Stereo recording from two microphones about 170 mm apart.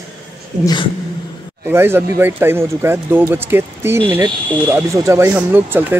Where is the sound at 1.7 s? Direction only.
15° right (ahead or behind).